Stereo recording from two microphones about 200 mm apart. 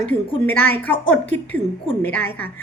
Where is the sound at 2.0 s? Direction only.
10° left (ahead or behind).